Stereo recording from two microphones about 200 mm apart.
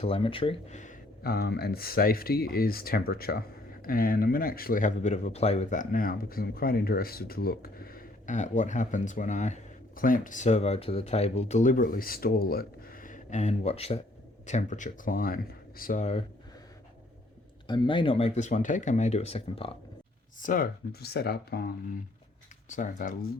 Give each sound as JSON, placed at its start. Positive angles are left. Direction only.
{"t": 0.0, "sound": "speech", "side_deg": 25}
{"t": 17.7, "sound": "speech", "side_deg": 25}
{"t": 20.4, "sound": "speech", "side_deg": 45}
{"t": 22.7, "sound": "speech", "side_deg": 40}